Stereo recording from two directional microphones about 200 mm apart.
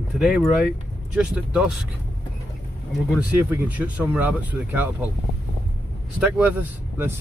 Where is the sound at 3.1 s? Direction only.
10° right (ahead or behind).